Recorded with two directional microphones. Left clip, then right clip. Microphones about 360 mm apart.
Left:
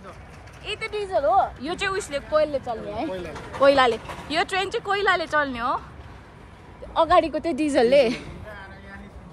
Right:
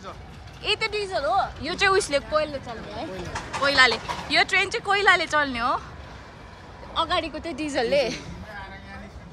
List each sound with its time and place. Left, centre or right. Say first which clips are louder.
0.7 s speech: right 3 dB; centre
7.0 s a woman's voice: left 7 dB; centre